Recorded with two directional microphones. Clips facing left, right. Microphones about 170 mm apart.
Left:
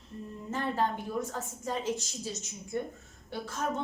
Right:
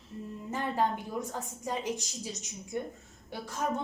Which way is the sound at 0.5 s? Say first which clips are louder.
Even; 15° right (ahead or behind).